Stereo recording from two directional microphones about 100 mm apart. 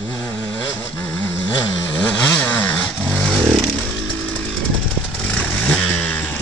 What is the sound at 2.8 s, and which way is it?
Vehicle, 5° left (ahead or behind).